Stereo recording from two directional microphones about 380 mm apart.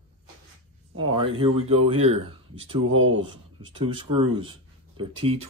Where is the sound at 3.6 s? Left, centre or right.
Centre.